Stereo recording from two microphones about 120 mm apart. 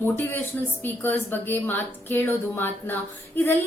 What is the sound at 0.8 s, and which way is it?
Speech, 15° left (ahead or behind).